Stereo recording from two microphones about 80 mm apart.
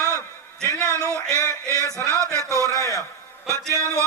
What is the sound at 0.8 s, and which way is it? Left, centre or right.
Speech, right.